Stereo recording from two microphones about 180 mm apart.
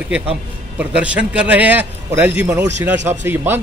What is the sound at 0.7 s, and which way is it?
A man's voice, 5° right (ahead or behind).